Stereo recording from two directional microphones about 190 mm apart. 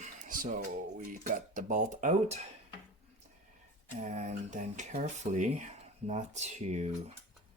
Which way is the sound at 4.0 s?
40° right (ahead or behind).